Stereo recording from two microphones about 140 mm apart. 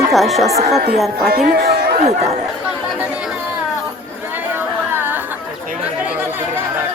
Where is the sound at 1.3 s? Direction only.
90° right.